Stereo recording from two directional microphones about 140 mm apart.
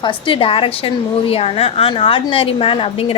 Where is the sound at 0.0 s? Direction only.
40° left (ahead or behind).